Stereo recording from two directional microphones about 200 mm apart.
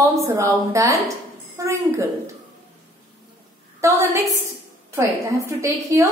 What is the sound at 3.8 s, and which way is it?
A woman's voice, 15° right (ahead or behind).